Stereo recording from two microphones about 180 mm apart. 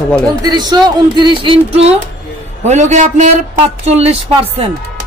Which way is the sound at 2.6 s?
40° right (ahead or behind).